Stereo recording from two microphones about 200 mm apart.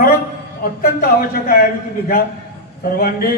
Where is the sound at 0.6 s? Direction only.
45° left (ahead or behind).